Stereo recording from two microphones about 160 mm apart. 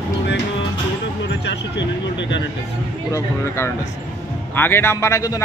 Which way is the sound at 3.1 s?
15° left (ahead or behind).